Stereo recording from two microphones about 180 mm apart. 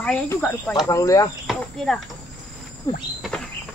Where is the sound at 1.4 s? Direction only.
Centre (ahead or behind).